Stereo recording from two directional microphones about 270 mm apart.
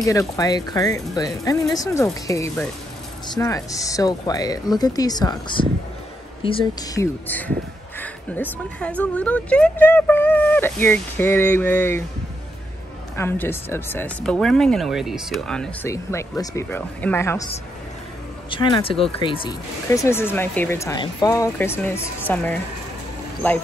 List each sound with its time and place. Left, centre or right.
0.0 s speech: centre
13.1 s speech: centre
18.5 s speech: centre